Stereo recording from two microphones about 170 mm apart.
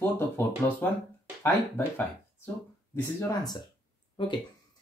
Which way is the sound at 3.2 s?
25° left (ahead or behind).